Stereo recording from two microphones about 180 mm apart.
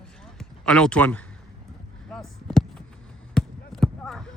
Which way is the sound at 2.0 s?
Centre (ahead or behind).